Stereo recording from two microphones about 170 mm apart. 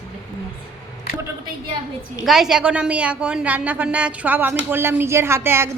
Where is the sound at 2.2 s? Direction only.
Centre (ahead or behind).